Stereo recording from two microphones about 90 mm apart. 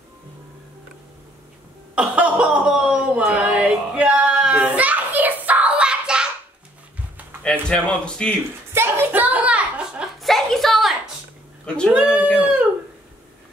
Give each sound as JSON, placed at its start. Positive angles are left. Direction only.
{"t": 2.0, "sound": "chuckle", "side_deg": -15}
{"t": 3.3, "sound": "child singing", "side_deg": -10}
{"t": 7.6, "sound": "speech", "side_deg": 10}
{"t": 8.7, "sound": "a sound", "side_deg": -30}
{"t": 10.2, "sound": "a sound", "side_deg": 0}
{"t": 11.6, "sound": "speech", "side_deg": 10}
{"t": 11.9, "sound": "speech", "side_deg": -10}
{"t": 12.4, "sound": "chicken", "side_deg": -15}